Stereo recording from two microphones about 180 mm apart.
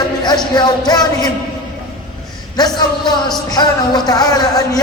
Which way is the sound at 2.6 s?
20° left (ahead or behind).